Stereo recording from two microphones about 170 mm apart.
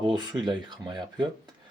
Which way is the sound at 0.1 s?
25° right (ahead or behind).